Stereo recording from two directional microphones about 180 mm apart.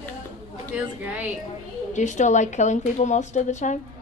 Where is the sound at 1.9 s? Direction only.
40° left (ahead or behind).